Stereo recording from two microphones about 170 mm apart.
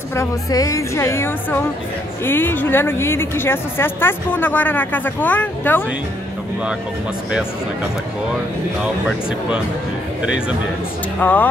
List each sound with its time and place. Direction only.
0.1 s a woman's voice: 20° left (ahead or behind)
11.1 s a woman's voice: 10° left (ahead or behind)